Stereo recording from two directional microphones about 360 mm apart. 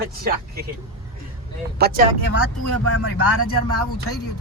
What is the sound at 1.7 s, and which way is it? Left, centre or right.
Speech, right.